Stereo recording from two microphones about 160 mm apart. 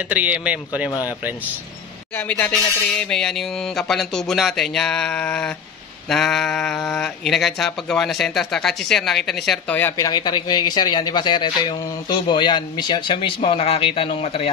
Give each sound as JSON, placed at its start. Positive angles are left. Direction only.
{"t": 0.1, "sound": "speech", "side_deg": -10}
{"t": 2.1, "sound": "speech", "side_deg": 10}
{"t": 9.8, "sound": "speech", "side_deg": 20}